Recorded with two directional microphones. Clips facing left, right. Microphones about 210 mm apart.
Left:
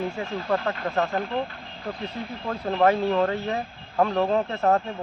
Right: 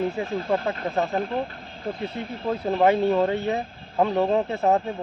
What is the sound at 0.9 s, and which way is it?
Speech, 15° right (ahead or behind).